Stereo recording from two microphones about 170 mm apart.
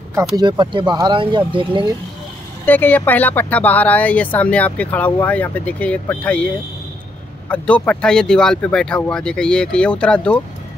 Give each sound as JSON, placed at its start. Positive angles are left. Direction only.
{"t": 0.1, "sound": "speech", "side_deg": -15}
{"t": 0.5, "sound": "speech", "side_deg": -30}
{"t": 2.6, "sound": "speech", "side_deg": 10}